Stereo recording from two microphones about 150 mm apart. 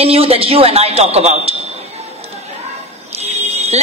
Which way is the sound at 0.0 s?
40° right (ahead or behind).